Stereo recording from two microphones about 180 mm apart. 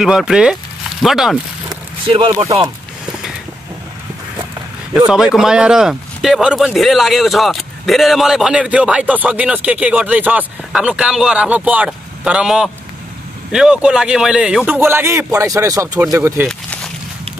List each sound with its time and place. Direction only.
0.0 s speech: 5° right (ahead or behind)
1.7 s vehicle: 30° right (ahead or behind)
4.9 s speech: 5° right (ahead or behind)
16.4 s a sound: 5° left (ahead or behind)